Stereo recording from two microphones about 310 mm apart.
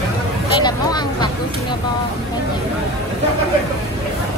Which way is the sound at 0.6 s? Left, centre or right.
Centre.